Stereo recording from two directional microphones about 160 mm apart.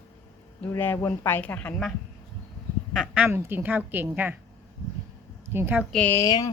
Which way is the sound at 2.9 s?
5° right (ahead or behind).